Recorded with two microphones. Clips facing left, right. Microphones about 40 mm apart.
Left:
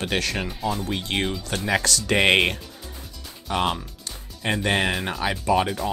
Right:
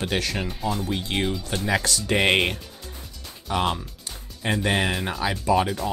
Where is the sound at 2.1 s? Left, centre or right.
Left.